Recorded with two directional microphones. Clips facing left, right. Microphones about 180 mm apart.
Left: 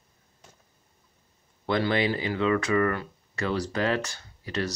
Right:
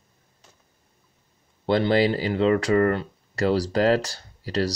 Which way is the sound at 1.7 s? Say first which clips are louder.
Right 5 dB; 30° right (ahead or behind).